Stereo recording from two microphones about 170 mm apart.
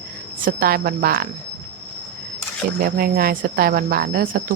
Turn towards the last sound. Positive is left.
turn(degrees=-60)  # may be behind; listen again after turning